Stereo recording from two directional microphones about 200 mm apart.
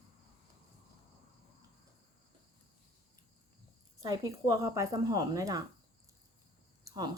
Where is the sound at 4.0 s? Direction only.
15° right (ahead or behind).